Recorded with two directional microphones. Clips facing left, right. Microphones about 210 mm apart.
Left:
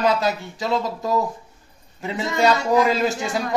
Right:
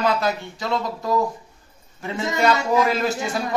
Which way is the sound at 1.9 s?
15° left (ahead or behind).